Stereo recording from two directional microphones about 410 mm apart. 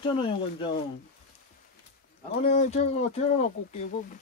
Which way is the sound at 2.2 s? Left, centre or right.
Centre.